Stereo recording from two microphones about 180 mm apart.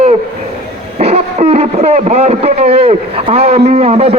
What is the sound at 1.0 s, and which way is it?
A man's voice, 35° right (ahead or behind).